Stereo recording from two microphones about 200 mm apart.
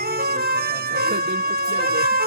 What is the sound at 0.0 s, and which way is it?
Music, 50° right (ahead or behind).